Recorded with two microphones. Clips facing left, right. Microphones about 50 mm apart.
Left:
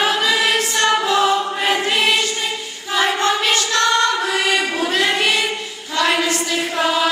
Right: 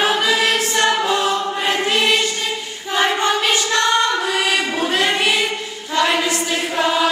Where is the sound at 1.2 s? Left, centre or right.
Centre.